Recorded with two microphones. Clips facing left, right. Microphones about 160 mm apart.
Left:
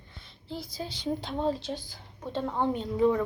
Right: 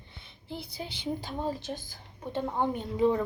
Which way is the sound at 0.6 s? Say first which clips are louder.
Left 3 dB; 60° right (ahead or behind).